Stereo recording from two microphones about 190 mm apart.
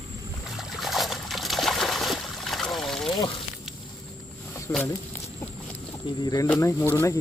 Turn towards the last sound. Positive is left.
turn(degrees=15)  # may be behind; listen again after turning